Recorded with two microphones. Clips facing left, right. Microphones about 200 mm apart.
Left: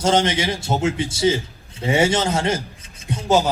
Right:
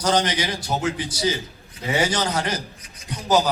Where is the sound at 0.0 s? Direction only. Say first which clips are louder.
Left 3 dB; 25° left (ahead or behind).